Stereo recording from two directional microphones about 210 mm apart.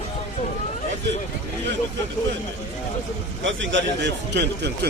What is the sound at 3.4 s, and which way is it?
A man's voice, 60° right (ahead or behind).